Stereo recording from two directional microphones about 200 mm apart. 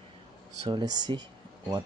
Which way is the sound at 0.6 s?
20° right (ahead or behind).